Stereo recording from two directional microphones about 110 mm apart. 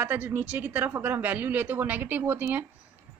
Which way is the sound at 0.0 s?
15° right (ahead or behind).